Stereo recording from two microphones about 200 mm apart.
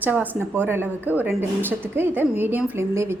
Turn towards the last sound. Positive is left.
turn(degrees=-15)  # may be behind; listen again after turning